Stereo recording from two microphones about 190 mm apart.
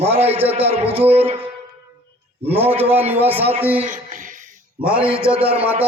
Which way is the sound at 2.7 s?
30° right (ahead or behind).